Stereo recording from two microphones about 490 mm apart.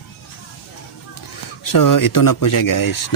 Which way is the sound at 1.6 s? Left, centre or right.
Left.